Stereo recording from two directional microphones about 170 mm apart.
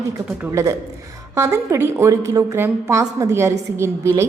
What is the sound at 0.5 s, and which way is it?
A woman's voice, 20° right (ahead or behind).